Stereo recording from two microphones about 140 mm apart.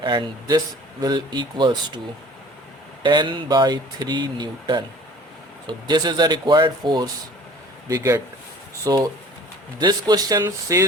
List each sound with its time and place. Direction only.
0.0 s speech: 35° right (ahead or behind)
3.0 s a man's voice: 35° right (ahead or behind)